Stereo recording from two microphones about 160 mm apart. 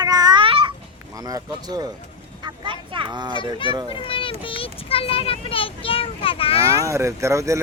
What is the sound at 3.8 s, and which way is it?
A child's voice, 35° left (ahead or behind).